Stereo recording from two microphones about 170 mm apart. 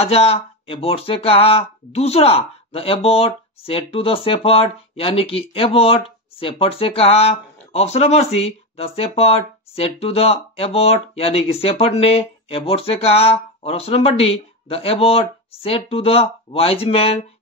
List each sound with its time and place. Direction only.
0.0 s speech: 35° left (ahead or behind)